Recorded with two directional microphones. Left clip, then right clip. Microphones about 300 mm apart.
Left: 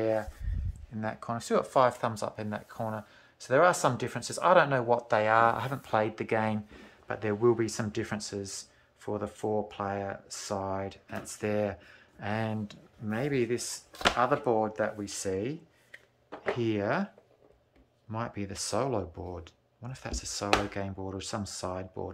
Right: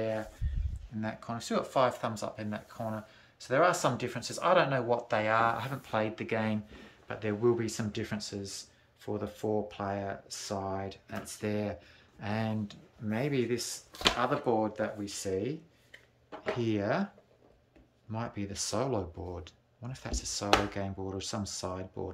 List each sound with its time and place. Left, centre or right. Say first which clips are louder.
0.0 s a sound: left 5 dB; centre
1.0 s speech: left 4 dB; centre
18.1 s speech: left 2 dB; centre